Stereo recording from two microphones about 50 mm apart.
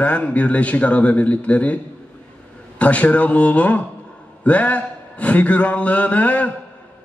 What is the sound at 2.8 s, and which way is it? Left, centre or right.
A man's voice, left.